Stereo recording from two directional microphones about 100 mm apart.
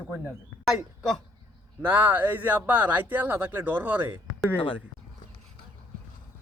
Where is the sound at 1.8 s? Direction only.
20° right (ahead or behind).